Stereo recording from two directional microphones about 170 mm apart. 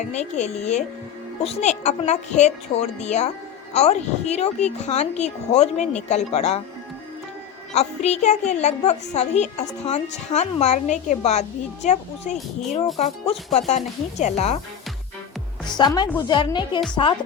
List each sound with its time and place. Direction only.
0.0 s a woman's voice: 40° left (ahead or behind)
7.7 s a woman's voice: 40° left (ahead or behind)
15.6 s a woman's voice: 25° left (ahead or behind)